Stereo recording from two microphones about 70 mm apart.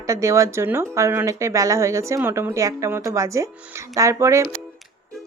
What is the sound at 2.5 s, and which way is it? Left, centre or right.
Speech, right.